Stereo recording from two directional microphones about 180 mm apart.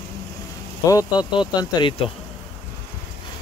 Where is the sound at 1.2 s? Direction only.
25° left (ahead or behind).